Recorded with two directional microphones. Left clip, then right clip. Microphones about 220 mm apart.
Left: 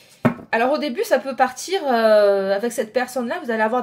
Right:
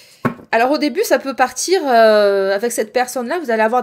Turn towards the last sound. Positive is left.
turn(degrees=-40)  # may be behind; listen again after turning